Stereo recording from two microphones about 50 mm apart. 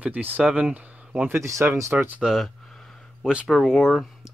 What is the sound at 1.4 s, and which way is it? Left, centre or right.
Speech, right.